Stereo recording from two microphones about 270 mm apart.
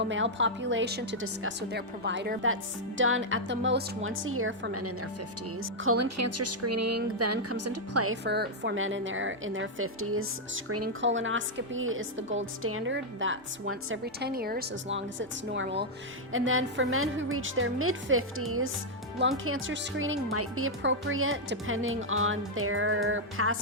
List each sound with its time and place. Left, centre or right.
0.0 s a woman's voice: right
8.1 s a woman's voice: right